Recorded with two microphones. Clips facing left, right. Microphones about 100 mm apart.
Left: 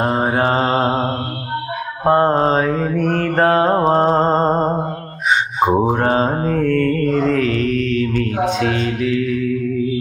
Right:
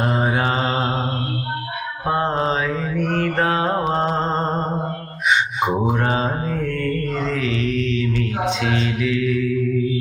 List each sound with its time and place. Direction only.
0.0 s mantra: 40° left (ahead or behind)
2.0 s mantra: 40° left (ahead or behind)